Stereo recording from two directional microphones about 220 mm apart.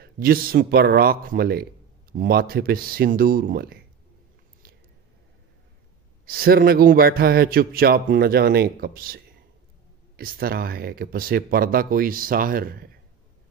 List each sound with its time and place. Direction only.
0.0 s a man's voice: 40° right (ahead or behind)
6.2 s a man's voice: 40° right (ahead or behind)